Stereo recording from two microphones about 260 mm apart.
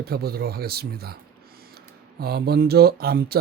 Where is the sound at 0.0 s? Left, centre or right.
Right.